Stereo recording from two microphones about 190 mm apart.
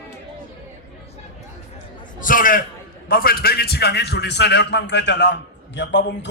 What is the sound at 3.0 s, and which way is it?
A man's voice, 50° left (ahead or behind).